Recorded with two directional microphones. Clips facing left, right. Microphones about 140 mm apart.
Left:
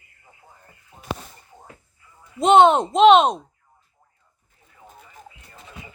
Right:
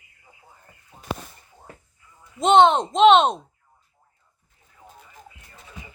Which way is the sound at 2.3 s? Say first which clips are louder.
Left 2 dB; 5° left (ahead or behind).